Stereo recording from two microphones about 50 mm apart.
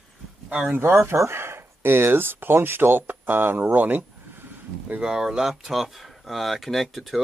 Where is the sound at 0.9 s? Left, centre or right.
Right.